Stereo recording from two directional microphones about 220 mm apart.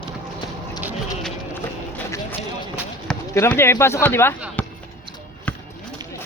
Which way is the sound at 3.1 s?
10° left (ahead or behind).